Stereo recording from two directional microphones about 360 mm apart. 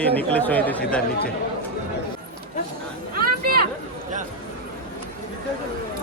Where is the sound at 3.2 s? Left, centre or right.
Right.